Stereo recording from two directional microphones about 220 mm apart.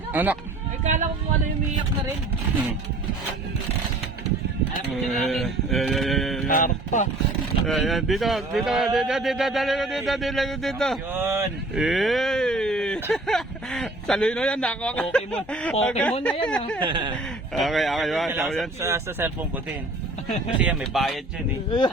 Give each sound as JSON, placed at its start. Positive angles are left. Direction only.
{"t": 0.1, "sound": "speech", "side_deg": -10}
{"t": 0.9, "sound": "speech", "side_deg": -35}
{"t": 5.2, "sound": "speech", "side_deg": 0}
{"t": 6.5, "sound": "speech", "side_deg": 35}
{"t": 7.7, "sound": "speech", "side_deg": 0}
{"t": 11.1, "sound": "speech", "side_deg": -10}
{"t": 16.8, "sound": "speech", "side_deg": -20}
{"t": 17.5, "sound": "speech", "side_deg": 0}
{"t": 18.8, "sound": "speech", "side_deg": -10}
{"t": 20.6, "sound": "speech", "side_deg": -5}